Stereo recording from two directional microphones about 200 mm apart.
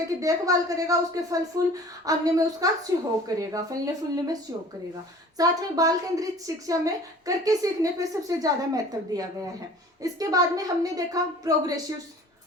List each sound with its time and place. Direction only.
0.2 s a woman's voice: 15° right (ahead or behind)
5.4 s a woman's voice: 20° right (ahead or behind)